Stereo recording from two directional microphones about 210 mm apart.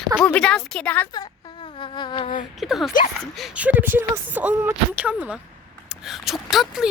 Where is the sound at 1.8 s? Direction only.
20° left (ahead or behind).